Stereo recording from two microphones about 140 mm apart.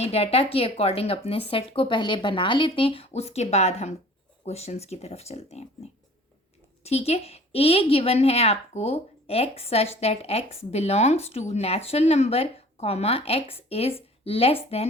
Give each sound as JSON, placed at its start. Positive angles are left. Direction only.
{"t": 0.0, "sound": "a woman's voice", "side_deg": 45}
{"t": 6.8, "sound": "a woman's voice", "side_deg": 50}